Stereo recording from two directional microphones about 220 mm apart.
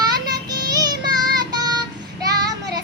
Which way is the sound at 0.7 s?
15° right (ahead or behind).